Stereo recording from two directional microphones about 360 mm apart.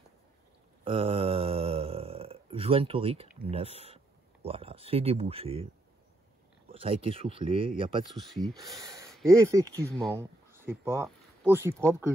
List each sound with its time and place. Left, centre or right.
0.8 s a sound: centre
3.4 s speech: centre
6.7 s speech: centre
8.1 s speech: centre